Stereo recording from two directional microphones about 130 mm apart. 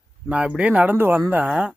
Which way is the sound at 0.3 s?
10° right (ahead or behind).